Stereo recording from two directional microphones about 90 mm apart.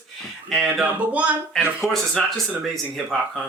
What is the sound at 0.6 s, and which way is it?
Music, 10° right (ahead or behind).